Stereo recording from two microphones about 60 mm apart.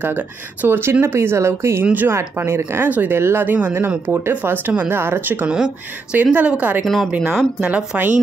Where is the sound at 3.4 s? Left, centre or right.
Right.